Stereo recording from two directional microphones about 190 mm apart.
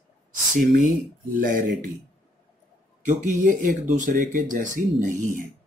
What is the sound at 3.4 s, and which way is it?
Speech, 45° right (ahead or behind).